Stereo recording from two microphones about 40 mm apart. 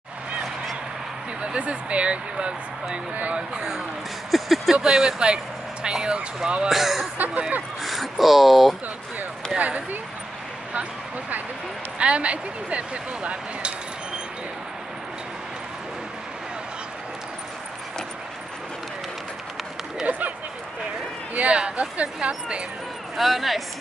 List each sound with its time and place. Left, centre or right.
1.4 s speech: right
4.3 s speech: centre
4.8 s speech: centre
6.7 s speech: centre
9.6 s speech: right
20.1 s a sound: right
21.4 s speech: right
23.1 s speech: centre